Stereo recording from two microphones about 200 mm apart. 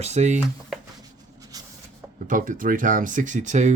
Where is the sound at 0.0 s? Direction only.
35° right (ahead or behind).